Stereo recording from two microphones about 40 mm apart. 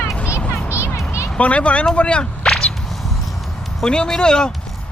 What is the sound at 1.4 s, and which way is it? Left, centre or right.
Speech, left.